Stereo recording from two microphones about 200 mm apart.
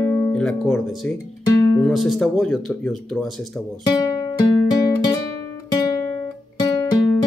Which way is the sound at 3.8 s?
20° left (ahead or behind).